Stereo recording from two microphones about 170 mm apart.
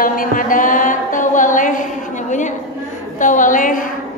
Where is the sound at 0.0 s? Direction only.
55° left (ahead or behind).